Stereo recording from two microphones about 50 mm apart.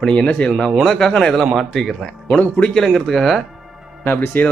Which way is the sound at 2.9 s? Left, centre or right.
Centre.